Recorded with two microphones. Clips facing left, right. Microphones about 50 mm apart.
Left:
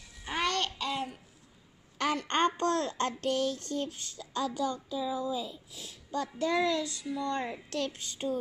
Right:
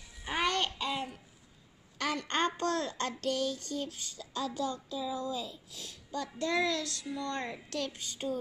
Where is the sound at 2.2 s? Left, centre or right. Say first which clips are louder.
Left 3 dB; left.